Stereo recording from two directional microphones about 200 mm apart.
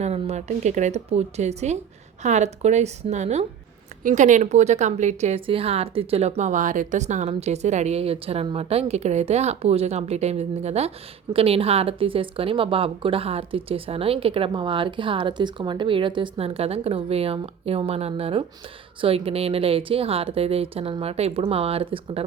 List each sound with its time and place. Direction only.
0.0 s a woman's voice: 30° right (ahead or behind)